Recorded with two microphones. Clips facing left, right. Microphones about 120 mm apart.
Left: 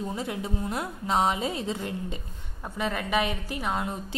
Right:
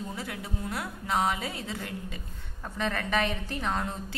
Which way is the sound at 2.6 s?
10° left (ahead or behind).